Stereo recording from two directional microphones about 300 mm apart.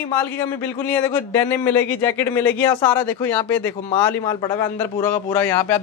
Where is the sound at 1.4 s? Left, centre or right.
Centre.